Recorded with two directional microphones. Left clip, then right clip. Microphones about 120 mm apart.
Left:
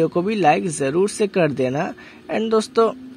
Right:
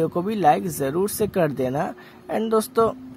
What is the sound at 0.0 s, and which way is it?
Speech, 20° left (ahead or behind).